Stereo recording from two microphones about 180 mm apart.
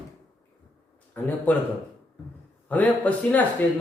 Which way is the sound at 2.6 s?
10° left (ahead or behind).